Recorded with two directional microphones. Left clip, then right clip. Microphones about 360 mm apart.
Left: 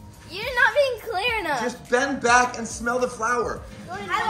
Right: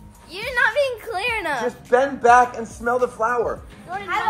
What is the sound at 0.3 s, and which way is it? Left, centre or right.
A woman's voice, centre.